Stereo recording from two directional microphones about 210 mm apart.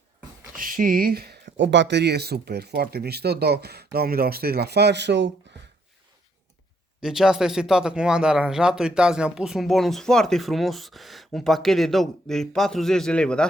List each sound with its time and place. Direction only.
0.5 s speech: 40° right (ahead or behind)
7.0 s speech: centre (ahead or behind)